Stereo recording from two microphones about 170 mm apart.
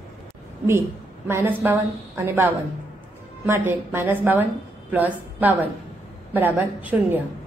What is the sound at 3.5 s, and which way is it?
A woman's voice, 10° right (ahead or behind).